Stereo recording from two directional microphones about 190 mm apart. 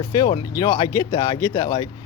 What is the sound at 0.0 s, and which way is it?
Speech, 20° left (ahead or behind).